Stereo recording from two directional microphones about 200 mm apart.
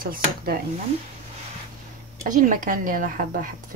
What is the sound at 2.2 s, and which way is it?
A woman's voice, 40° right (ahead or behind).